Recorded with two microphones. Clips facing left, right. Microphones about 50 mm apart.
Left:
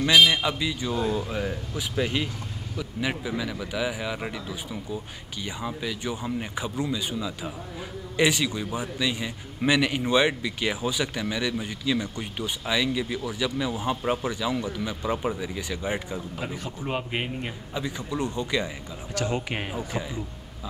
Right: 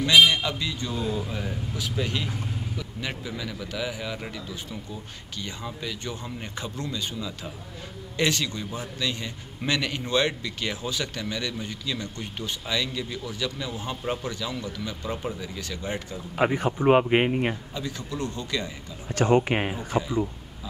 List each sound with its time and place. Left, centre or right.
0.3 s a man's voice: centre
16.5 s speech: right
17.7 s speech: centre
19.1 s speech: right
19.5 s speech: centre